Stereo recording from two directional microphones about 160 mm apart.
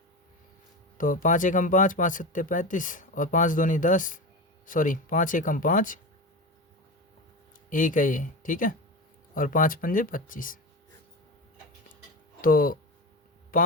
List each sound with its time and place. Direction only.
0.9 s speech: 55° left (ahead or behind)
7.7 s speech: 55° left (ahead or behind)
12.4 s speech: 60° left (ahead or behind)